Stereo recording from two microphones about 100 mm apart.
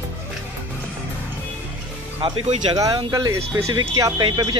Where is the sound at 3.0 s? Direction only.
40° right (ahead or behind).